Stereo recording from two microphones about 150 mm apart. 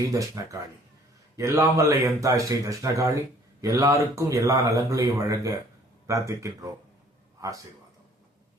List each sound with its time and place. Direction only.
1.4 s speech: 20° right (ahead or behind)